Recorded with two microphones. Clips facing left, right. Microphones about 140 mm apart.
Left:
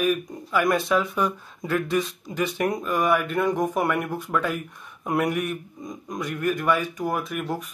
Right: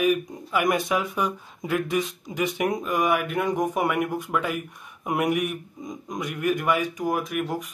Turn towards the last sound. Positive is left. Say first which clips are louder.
# right 1 dB
turn(degrees=-15)  # may be behind; listen again after turning